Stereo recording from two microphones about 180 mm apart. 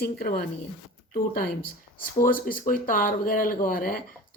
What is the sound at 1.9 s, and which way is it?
Speech, 50° left (ahead or behind).